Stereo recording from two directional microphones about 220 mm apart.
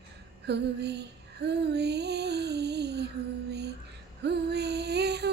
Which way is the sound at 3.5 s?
50° right (ahead or behind).